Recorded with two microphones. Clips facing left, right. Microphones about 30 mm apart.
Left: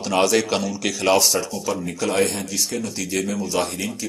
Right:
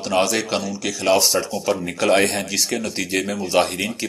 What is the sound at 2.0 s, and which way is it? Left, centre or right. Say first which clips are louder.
Speech: right 4 dB; right.